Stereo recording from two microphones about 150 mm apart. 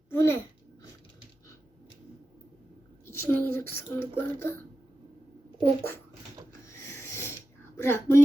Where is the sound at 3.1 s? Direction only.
15° left (ahead or behind).